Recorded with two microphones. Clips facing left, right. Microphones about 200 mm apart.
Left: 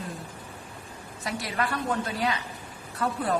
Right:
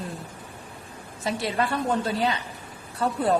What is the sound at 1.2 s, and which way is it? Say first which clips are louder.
A woman's voice: right 4 dB; 25° right (ahead or behind).